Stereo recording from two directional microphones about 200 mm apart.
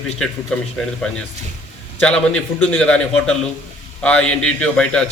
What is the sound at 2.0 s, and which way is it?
A man's voice, 5° left (ahead or behind).